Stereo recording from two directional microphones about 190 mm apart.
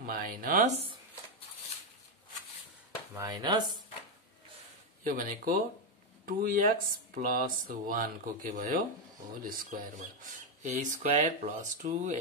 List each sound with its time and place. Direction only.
0.0 s speech: 50° right (ahead or behind)
3.2 s speech: 20° right (ahead or behind)
5.0 s speech: 45° right (ahead or behind)